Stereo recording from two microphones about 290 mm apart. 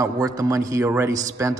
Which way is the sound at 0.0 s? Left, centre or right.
Centre.